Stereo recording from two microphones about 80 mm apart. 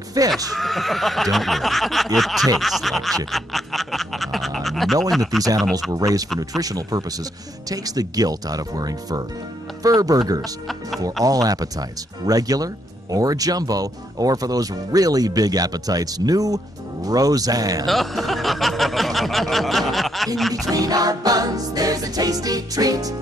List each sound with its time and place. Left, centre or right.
0.2 s speech: right
0.6 s snicker: centre
3.3 s a sound: centre
5.1 s snicker: centre
5.9 s speech: right
17.8 s a sound: centre
20.3 s snicker: centre
20.6 s speech: right